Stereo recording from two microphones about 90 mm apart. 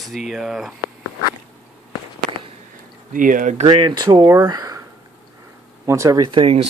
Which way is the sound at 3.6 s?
60° right (ahead or behind).